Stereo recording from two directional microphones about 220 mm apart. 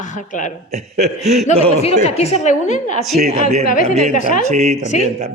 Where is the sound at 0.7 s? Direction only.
30° right (ahead or behind).